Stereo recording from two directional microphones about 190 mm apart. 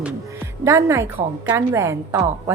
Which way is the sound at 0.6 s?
15° right (ahead or behind).